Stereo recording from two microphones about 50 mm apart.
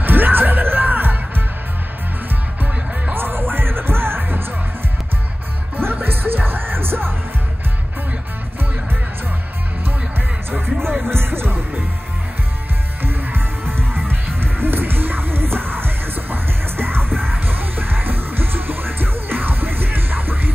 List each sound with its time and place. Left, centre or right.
0.0 s music: right
3.2 s music: right
5.8 s music: right
10.5 s music: right
13.0 s music: right